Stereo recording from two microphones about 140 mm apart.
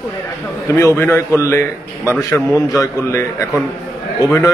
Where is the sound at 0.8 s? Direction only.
20° left (ahead or behind).